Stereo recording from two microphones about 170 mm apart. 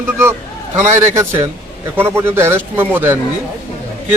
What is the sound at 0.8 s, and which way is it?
Speech, 45° right (ahead or behind).